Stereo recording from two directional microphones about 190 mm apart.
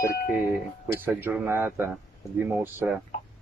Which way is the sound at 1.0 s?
10° right (ahead or behind).